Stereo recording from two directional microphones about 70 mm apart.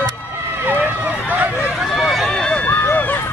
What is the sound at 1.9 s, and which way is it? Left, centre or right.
Run, centre.